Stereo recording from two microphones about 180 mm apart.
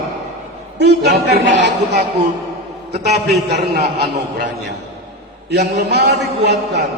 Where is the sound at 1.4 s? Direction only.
85° right; by 3.9 s 65° right (ahead or behind).